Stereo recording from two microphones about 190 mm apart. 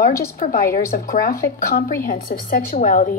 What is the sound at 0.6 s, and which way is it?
Speech, 15° left (ahead or behind).